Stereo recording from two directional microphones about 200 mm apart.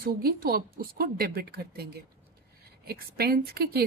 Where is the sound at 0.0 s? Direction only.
50° right (ahead or behind).